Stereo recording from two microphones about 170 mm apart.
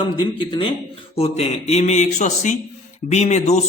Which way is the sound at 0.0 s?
30° left (ahead or behind).